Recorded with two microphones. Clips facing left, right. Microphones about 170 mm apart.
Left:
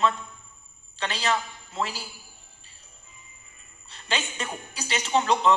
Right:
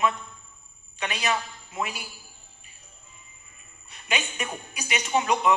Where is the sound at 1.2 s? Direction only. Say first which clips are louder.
Left 1 dB; 15° right (ahead or behind).